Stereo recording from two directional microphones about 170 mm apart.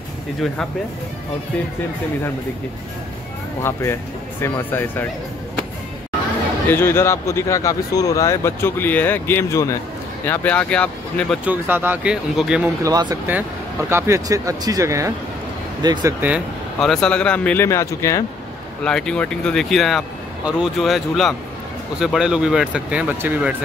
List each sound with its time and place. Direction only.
3.6 s speech: 15° left (ahead or behind)
6.7 s speech: 15° left (ahead or behind)
11.4 s speech: 10° right (ahead or behind)
12.8 s speech: 20° right (ahead or behind); by 18.2 s 15° left (ahead or behind)
18.9 s speech: 5° left (ahead or behind)